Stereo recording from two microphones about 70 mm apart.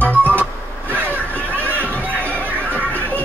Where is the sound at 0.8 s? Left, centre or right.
Right.